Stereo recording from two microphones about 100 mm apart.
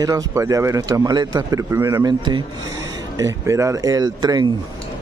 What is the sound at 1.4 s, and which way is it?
Speech, 30° right (ahead or behind).